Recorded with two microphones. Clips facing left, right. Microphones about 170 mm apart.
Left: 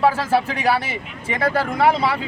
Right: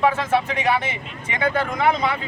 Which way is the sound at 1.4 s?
35° left (ahead or behind).